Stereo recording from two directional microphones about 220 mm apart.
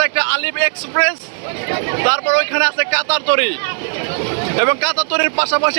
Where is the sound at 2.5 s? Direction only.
35° right (ahead or behind).